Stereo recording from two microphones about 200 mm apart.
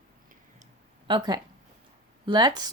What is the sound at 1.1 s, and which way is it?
Speech, 25° right (ahead or behind).